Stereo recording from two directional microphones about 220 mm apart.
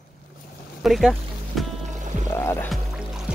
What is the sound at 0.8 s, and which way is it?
Speech, centre (ahead or behind).